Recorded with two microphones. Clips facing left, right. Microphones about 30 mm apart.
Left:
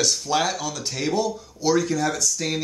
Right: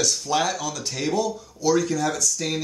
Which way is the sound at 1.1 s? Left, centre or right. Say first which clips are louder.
Even; left.